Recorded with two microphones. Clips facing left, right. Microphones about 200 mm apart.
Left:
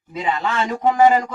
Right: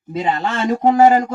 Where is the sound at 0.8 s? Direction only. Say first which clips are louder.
Right 3 dB; 30° right (ahead or behind).